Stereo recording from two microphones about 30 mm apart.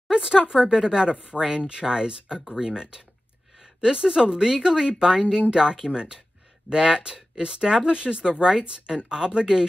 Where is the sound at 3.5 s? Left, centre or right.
Centre.